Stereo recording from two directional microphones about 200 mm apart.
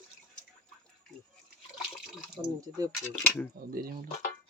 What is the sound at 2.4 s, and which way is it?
Speech, 20° right (ahead or behind).